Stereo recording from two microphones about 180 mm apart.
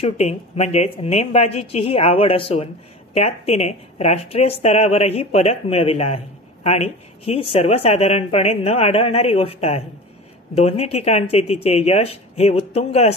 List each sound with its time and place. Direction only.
0.0 s speech: 35° left (ahead or behind)